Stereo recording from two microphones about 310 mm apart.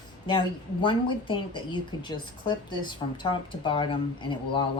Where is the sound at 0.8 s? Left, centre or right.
Centre.